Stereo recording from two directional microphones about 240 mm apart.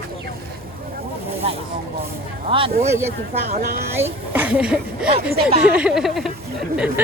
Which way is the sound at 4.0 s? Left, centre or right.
Centre.